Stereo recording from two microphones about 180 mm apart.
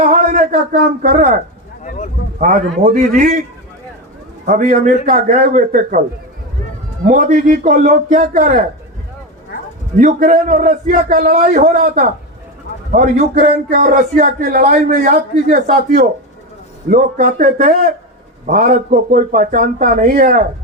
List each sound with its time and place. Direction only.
0.0 s a man's voice: 45° right (ahead or behind)
1.8 s a sound: 40° left (ahead or behind)
2.8 s a man's voice: 40° right (ahead or behind)
4.4 s speech: 45° right (ahead or behind)
7.0 s speech: 45° right (ahead or behind)
10.0 s speech: 45° right (ahead or behind)